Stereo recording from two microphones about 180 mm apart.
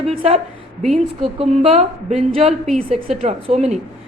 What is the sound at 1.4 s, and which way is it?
A woman's voice, 35° right (ahead or behind).